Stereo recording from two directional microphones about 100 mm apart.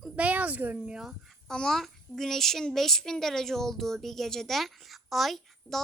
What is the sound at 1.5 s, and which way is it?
Speech, 5° left (ahead or behind).